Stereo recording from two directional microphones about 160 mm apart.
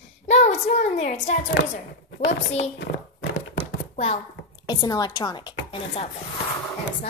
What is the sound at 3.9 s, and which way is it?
Speech, 40° left (ahead or behind).